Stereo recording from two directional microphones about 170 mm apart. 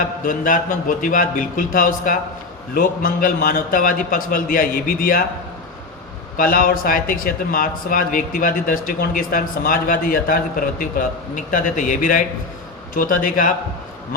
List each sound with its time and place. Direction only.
0.3 s a man's voice: 50° left (ahead or behind)
6.3 s a man's voice: 55° left (ahead or behind)